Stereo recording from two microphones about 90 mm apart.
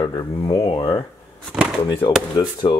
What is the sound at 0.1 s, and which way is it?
Speech, 55° left (ahead or behind).